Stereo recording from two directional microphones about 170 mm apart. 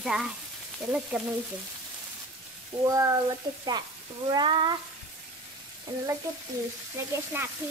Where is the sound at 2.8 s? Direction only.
20° right (ahead or behind).